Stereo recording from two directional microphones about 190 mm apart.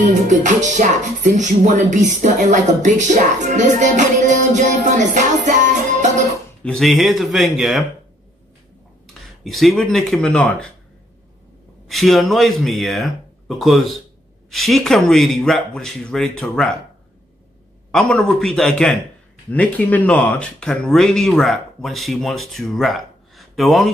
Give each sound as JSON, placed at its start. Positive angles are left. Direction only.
{"t": 0.0, "sound": "music", "side_deg": -40}
{"t": 6.6, "sound": "speech", "side_deg": 5}
{"t": 9.0, "sound": "speech", "side_deg": 0}
{"t": 11.9, "sound": "speech", "side_deg": 0}
{"t": 17.9, "sound": "speech", "side_deg": 5}